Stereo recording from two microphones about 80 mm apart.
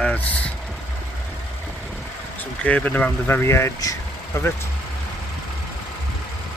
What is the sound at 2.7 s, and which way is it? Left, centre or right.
Speech, centre.